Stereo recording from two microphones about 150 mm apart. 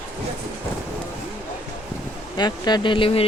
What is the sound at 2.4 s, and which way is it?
Speech, 30° left (ahead or behind).